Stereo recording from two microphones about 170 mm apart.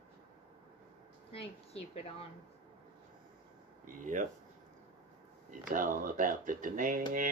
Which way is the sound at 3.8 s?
50° right (ahead or behind).